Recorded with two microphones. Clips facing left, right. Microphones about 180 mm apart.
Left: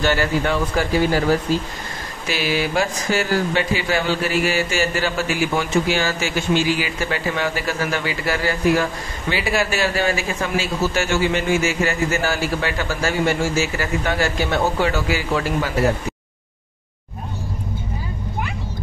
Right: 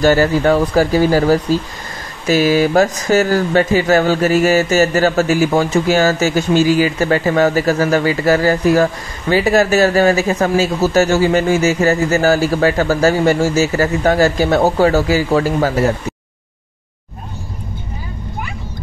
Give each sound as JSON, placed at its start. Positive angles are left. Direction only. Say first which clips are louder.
{"t": 0.0, "sound": "speech", "louder": "right 8 dB", "side_deg": -40}